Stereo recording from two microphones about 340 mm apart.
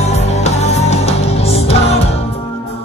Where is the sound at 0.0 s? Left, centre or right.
Centre.